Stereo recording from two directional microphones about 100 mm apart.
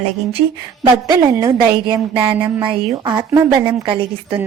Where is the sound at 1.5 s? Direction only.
45° right (ahead or behind).